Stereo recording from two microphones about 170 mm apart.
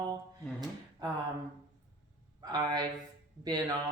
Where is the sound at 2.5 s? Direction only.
25° right (ahead or behind).